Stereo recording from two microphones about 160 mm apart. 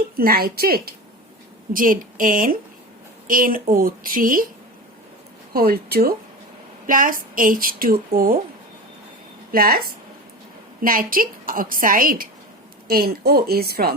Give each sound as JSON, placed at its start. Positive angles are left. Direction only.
{"t": 0.2, "sound": "a woman's voice", "side_deg": -70}
{"t": 1.7, "sound": "a woman's voice", "side_deg": -60}
{"t": 5.5, "sound": "a woman's voice", "side_deg": -70}
{"t": 6.8, "sound": "a woman's voice", "side_deg": -60}
{"t": 9.5, "sound": "a woman's voice", "side_deg": -70}
{"t": 12.9, "sound": "a woman's voice", "side_deg": -75}